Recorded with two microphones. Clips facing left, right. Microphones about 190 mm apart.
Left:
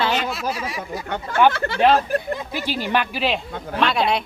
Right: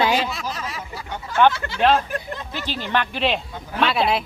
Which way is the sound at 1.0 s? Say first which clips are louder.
Even; 60° left (ahead or behind).